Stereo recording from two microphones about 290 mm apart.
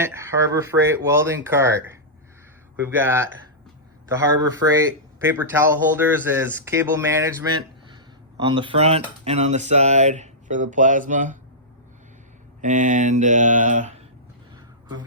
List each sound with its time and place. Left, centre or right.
0.0 s speech: centre
8.4 s speech: centre
12.6 s speech: right